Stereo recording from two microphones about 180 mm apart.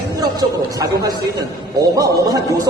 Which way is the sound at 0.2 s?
20° right (ahead or behind).